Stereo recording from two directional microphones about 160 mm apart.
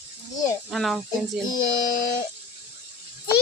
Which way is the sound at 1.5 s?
25° left (ahead or behind).